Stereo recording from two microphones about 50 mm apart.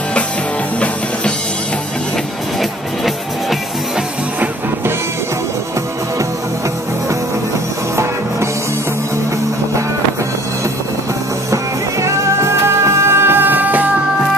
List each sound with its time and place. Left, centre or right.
7.9 s music: right
11.5 s music: right